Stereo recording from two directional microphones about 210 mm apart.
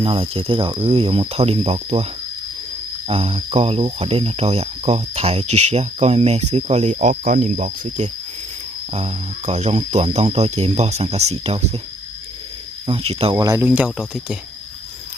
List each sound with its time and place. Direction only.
0.0 s speech: 25° right (ahead or behind)
3.1 s speech: 25° right (ahead or behind)
12.8 s speech: 25° right (ahead or behind)
13.3 s speech: 15° right (ahead or behind)